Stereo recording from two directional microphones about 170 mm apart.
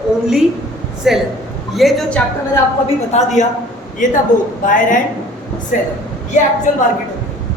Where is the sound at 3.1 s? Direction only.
40° left (ahead or behind).